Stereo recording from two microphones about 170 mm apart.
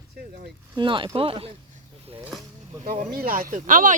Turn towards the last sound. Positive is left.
turn(degrees=-50)  # may be behind; listen again after turning